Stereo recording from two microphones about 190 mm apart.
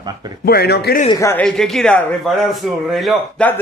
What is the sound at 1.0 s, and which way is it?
Speech, 15° left (ahead or behind).